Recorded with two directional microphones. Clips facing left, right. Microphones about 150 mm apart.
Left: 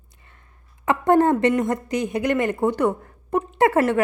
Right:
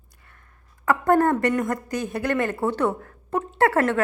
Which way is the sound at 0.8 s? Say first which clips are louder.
Left 2 dB; 20° left (ahead or behind).